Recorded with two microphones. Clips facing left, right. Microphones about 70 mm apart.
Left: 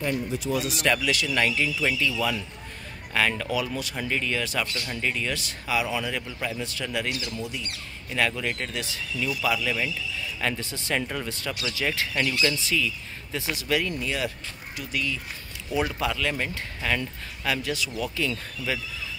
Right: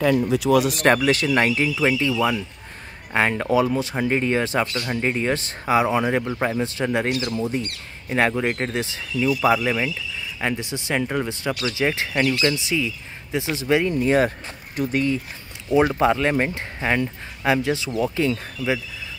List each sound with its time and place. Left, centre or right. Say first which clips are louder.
0.3 s speech: right 10 dB; right
0.7 s speech: right 7 dB; right
7.1 s speech: right 7 dB; right
7.3 s speech: right 8 dB; right
10.4 s speech: right 5 dB; centre